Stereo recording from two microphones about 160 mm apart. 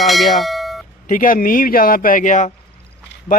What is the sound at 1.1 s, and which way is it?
A man's voice, 60° left (ahead or behind).